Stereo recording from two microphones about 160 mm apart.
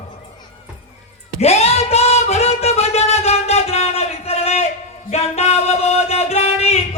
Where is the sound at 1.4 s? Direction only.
40° left (ahead or behind).